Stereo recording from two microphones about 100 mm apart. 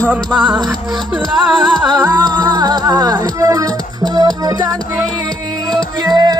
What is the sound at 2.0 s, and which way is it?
Music, 40° right (ahead or behind).